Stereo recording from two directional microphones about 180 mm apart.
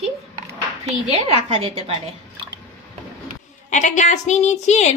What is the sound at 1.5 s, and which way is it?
Speech, 35° right (ahead or behind).